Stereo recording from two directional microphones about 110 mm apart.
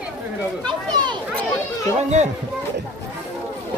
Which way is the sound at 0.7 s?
45° right (ahead or behind).